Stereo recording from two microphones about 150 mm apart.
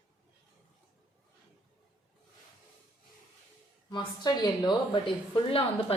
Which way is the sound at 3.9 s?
25° left (ahead or behind).